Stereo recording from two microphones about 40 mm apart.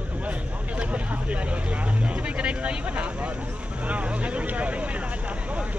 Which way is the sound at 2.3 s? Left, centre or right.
Right.